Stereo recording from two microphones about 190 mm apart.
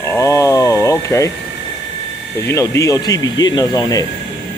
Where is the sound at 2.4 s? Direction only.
15° left (ahead or behind).